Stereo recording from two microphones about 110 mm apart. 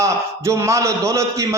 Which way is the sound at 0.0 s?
25° right (ahead or behind).